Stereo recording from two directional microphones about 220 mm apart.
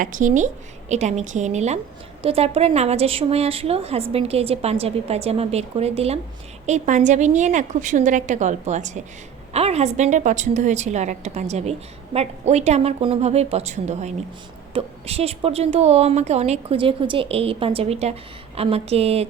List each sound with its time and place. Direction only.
0.0 s a woman's voice: 35° right (ahead or behind)